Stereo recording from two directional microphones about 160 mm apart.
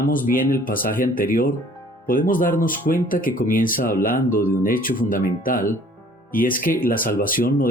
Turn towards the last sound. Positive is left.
turn(degrees=60)  # may be behind; listen again after turning